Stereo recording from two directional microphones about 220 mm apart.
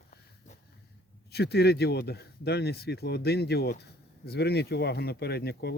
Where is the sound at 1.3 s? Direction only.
45° left (ahead or behind).